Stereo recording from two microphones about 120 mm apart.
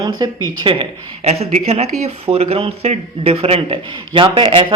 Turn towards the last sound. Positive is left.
turn(degrees=-45)  # may be behind; listen again after turning